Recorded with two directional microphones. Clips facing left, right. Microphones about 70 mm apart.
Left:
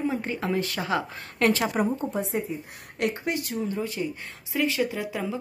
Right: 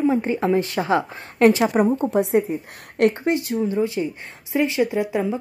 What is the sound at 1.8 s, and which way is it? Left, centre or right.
A woman's voice, right.